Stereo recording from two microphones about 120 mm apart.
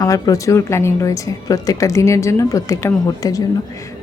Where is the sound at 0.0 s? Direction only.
30° left (ahead or behind).